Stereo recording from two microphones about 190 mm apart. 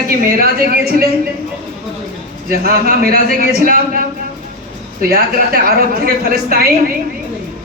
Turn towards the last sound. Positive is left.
turn(degrees=-50)  # may be behind; listen again after turning